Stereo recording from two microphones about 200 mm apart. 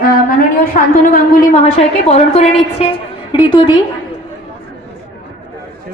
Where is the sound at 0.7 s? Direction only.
45° left (ahead or behind).